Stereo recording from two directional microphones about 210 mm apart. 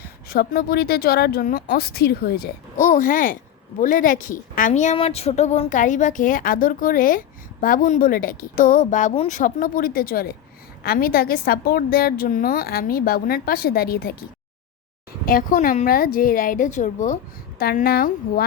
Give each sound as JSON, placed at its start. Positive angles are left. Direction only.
{"t": 0.3, "sound": "a woman's voice", "side_deg": 45}
{"t": 15.3, "sound": "a woman's voice", "side_deg": 40}